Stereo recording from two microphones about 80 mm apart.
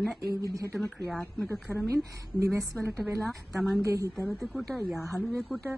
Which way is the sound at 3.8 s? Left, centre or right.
Right.